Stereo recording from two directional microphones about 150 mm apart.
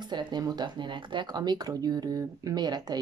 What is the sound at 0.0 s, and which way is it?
Speech, 30° right (ahead or behind).